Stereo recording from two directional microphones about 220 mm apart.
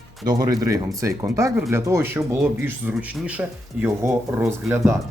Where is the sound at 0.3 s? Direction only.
15° right (ahead or behind).